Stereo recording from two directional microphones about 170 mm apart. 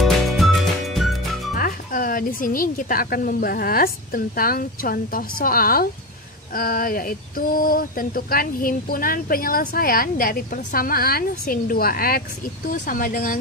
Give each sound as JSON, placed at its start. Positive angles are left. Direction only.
{"t": 0.0, "sound": "music", "side_deg": 0}
{"t": 1.5, "sound": "speech", "side_deg": 55}